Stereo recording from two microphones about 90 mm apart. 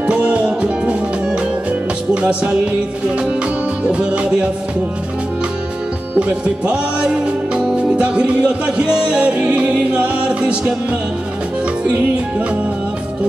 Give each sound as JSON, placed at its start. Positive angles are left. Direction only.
{"t": 0.0, "sound": "music", "side_deg": -15}
{"t": 3.8, "sound": "music", "side_deg": -10}
{"t": 6.1, "sound": "music", "side_deg": -15}